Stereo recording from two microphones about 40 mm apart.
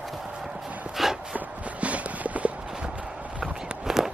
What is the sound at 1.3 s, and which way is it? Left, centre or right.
Clip-clop, right.